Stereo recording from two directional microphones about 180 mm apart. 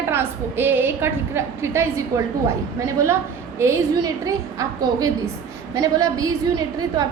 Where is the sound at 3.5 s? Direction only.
15° right (ahead or behind).